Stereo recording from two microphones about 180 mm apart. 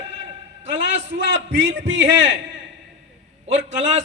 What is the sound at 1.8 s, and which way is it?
Speech, 90° right.